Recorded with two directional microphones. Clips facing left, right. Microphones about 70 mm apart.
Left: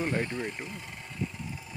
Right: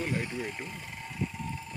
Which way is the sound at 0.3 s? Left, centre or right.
Centre.